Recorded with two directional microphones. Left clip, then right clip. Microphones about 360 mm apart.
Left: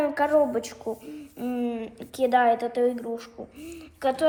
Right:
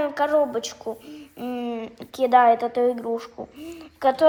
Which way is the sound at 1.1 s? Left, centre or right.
Centre.